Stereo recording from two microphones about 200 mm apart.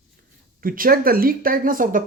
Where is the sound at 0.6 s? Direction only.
45° right (ahead or behind).